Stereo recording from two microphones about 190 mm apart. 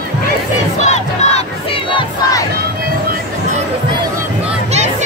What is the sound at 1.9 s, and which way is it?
Crowd, 25° left (ahead or behind).